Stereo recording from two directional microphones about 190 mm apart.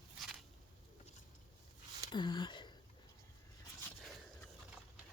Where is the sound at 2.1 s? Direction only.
25° left (ahead or behind).